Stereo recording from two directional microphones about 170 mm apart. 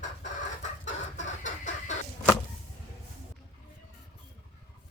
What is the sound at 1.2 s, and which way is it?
Chicken, 45° left (ahead or behind).